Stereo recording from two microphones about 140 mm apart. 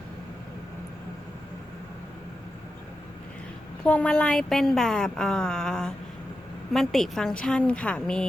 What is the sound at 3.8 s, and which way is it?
A woman's voice, 10° left (ahead or behind).